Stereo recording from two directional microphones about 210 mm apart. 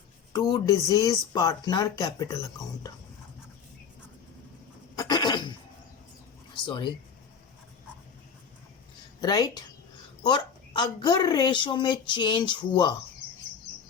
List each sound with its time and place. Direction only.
0.3 s speech: 20° left (ahead or behind)
4.9 s a sound: 20° left (ahead or behind)
9.2 s a woman's voice: 20° left (ahead or behind)